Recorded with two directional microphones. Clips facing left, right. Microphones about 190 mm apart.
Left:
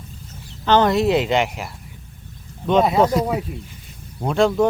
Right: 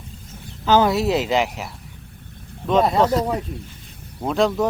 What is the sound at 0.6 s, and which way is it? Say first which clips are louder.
Speech: left 1 dB; 5° right (ahead or behind).